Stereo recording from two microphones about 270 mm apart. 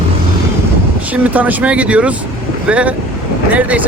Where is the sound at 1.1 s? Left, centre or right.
Centre.